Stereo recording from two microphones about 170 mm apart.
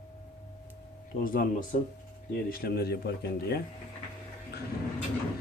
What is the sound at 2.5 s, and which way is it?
Speech, 65° left (ahead or behind).